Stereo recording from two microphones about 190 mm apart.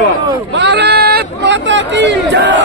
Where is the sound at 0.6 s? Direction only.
60° right (ahead or behind).